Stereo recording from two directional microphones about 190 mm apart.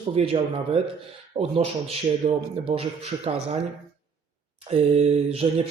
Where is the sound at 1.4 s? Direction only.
30° right (ahead or behind).